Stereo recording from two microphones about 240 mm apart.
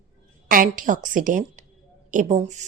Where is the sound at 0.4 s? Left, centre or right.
Right.